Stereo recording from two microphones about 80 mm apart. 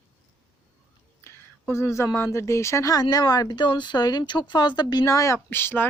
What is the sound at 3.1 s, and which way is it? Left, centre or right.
Speech, left.